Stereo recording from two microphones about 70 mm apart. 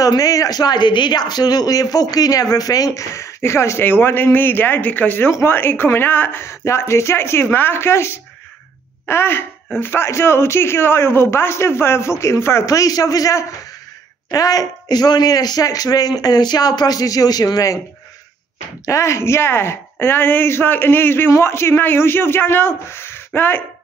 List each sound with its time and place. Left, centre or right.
0.0 s speech: left
3.9 s a man's voice: left
9.0 s throat clearing: left
9.8 s a man's voice: left
18.9 s a man's voice: left